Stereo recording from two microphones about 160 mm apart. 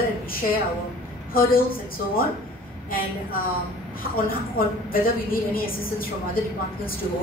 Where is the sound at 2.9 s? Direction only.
65° left (ahead or behind).